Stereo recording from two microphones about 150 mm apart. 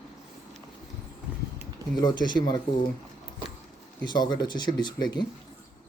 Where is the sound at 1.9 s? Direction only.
30° left (ahead or behind).